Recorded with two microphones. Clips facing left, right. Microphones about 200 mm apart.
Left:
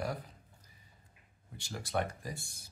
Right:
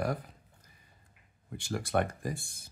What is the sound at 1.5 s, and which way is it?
Speech, 55° right (ahead or behind).